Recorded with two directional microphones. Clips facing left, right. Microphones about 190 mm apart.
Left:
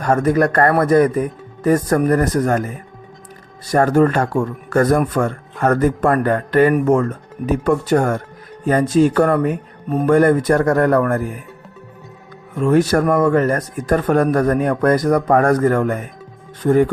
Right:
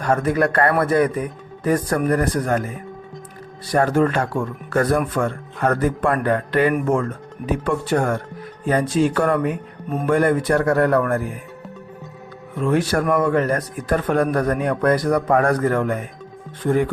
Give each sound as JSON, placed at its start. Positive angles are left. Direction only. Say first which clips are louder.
{"t": 0.0, "sound": "speech", "louder": "left 3 dB", "side_deg": 45}
{"t": 3.7, "sound": "speech", "louder": "left 4 dB", "side_deg": 45}
{"t": 12.5, "sound": "speech", "louder": "left 5 dB", "side_deg": 45}